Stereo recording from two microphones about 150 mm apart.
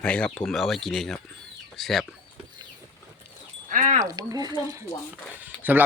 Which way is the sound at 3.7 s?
55° right (ahead or behind).